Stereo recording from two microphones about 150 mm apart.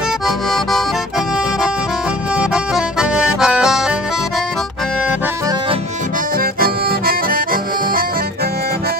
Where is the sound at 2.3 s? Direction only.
5° right (ahead or behind).